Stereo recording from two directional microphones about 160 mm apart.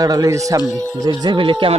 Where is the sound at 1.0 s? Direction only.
25° right (ahead or behind).